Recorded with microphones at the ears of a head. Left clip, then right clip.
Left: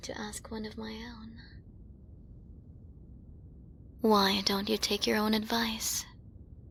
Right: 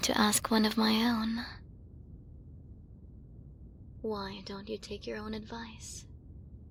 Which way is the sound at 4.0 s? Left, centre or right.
Left.